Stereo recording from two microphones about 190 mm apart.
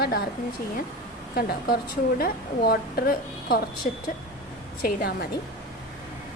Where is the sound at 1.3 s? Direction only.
50° left (ahead or behind).